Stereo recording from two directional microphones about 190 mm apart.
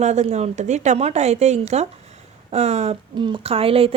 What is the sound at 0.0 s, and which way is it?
Speech, 35° right (ahead or behind).